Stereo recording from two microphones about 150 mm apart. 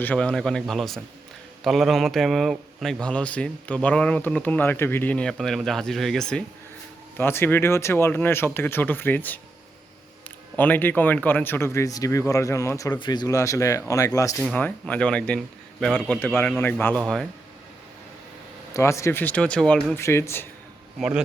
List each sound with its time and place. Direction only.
0.0 s a man's voice: 10° left (ahead or behind)
7.2 s speech: 15° left (ahead or behind)
10.6 s speech: 10° left (ahead or behind)
14.3 s speech: 5° left (ahead or behind)
18.7 s speech: 20° left (ahead or behind)
20.0 s speech: 20° left (ahead or behind)